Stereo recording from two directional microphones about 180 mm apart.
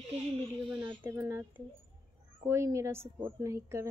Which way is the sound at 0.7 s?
10° right (ahead or behind).